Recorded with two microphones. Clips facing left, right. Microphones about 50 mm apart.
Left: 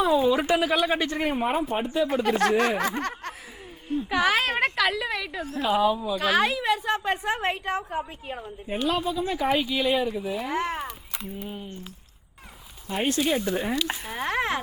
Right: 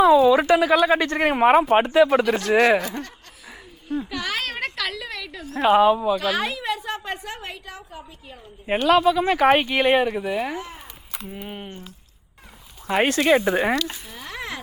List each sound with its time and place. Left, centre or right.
0.3 s speech: right
4.1 s a woman's voice: centre
5.5 s a woman's voice: right
6.1 s speech: centre
7.3 s a woman's voice: left
7.5 s a woman's voice: left
8.6 s speech: right
10.5 s speech: left
11.4 s a woman's voice: right
12.9 s speech: right
13.8 s speech: left